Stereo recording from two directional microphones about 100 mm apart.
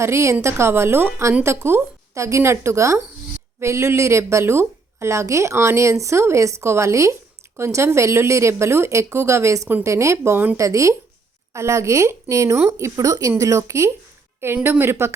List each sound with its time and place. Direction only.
0.0 s a woman's voice: 25° right (ahead or behind)